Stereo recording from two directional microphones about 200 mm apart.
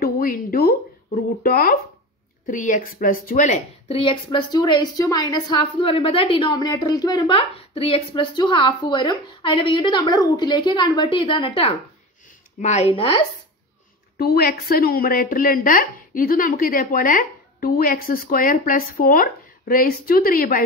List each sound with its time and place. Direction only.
0.0 s a woman's voice: 45° left (ahead or behind); by 13.2 s 25° left (ahead or behind)
14.1 s a woman's voice: 50° left (ahead or behind)